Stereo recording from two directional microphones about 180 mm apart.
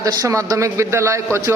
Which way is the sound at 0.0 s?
20° right (ahead or behind).